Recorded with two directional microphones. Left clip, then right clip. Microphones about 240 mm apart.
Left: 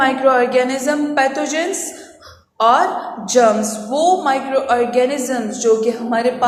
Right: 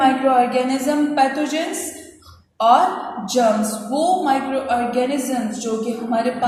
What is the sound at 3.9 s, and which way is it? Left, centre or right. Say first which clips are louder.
A woman's voice: left 3 dB; left.